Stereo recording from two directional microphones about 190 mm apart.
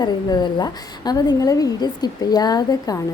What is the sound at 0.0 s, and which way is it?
A woman's voice, 20° left (ahead or behind).